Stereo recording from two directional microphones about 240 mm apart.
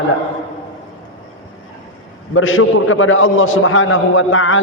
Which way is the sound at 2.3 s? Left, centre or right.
Left.